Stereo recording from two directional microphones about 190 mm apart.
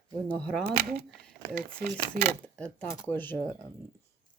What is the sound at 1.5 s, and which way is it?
Speech, 50° right (ahead or behind).